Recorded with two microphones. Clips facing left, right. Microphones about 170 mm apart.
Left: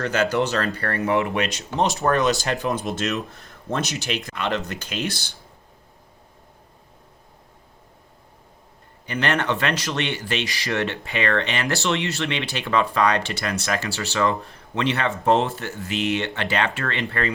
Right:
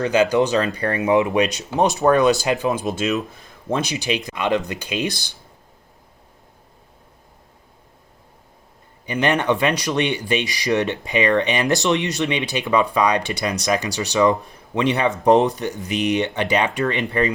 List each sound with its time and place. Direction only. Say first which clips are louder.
0.0 s speech: right 5 dB; 15° right (ahead or behind)
9.0 s speech: right 4 dB; 15° right (ahead or behind)